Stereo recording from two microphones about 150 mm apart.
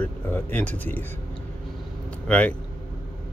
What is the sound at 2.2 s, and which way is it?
Speech, 10° left (ahead or behind).